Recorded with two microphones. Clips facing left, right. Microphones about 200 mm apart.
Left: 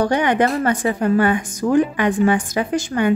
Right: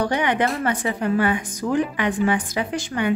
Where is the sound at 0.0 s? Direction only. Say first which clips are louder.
Left 4 dB; 45° left (ahead or behind).